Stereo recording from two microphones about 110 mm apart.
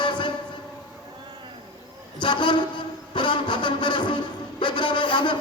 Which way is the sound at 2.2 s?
45° left (ahead or behind).